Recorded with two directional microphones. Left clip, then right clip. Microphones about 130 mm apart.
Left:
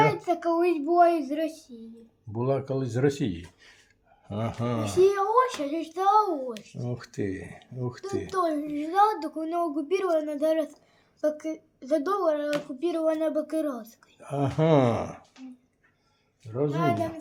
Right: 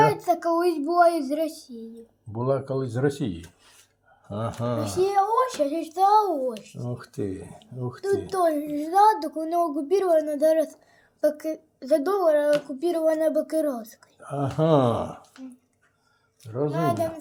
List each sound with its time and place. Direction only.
0.0 s speech: 50° right (ahead or behind)
2.3 s speech: 10° left (ahead or behind)
4.8 s a woman's voice: 30° right (ahead or behind)
6.7 s speech: 15° left (ahead or behind)
8.3 s a woman's voice: 45° right (ahead or behind)
14.2 s speech: 20° left (ahead or behind)
16.5 s a woman's voice: 5° left (ahead or behind)
16.7 s a woman's voice: 40° right (ahead or behind)